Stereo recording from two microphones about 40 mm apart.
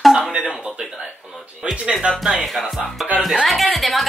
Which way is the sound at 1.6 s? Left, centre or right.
Centre.